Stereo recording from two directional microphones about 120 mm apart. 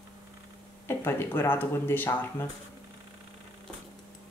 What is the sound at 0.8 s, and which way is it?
Speech, 20° left (ahead or behind).